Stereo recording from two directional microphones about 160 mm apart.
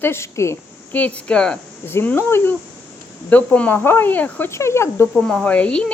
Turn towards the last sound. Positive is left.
turn(degrees=5)  # may be behind; listen again after turning